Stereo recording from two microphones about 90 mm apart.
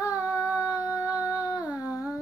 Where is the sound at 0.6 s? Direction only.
40° left (ahead or behind).